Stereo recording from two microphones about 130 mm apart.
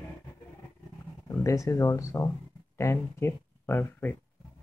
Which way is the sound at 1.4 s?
25° left (ahead or behind).